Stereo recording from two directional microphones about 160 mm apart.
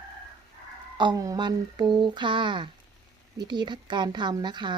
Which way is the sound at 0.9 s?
25° right (ahead or behind).